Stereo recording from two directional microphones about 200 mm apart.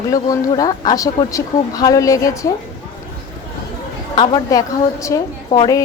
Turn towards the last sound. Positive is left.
turn(degrees=20)  # may be behind; listen again after turning